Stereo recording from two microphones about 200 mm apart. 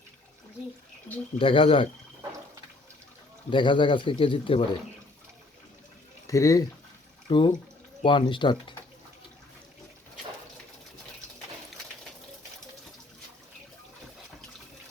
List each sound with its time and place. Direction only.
1.4 s speech: 25° left (ahead or behind)
3.5 s speech: 25° left (ahead or behind)
6.2 s speech: 15° left (ahead or behind)